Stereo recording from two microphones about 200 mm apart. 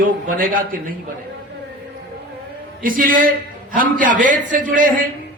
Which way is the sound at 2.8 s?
45° right (ahead or behind).